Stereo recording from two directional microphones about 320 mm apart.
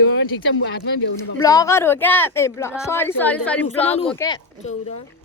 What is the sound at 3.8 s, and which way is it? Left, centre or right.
Speech, centre.